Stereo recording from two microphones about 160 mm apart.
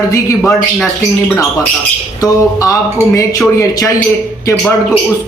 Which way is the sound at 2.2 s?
20° left (ahead or behind).